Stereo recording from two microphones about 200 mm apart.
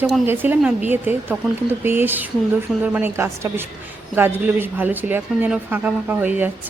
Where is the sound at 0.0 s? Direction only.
10° right (ahead or behind).